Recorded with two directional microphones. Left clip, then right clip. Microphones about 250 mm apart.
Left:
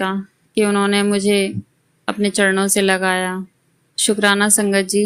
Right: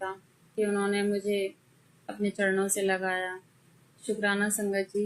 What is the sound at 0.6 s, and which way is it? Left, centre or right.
Speech, left.